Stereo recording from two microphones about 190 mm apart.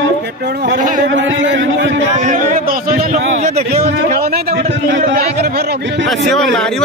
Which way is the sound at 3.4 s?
35° right (ahead or behind).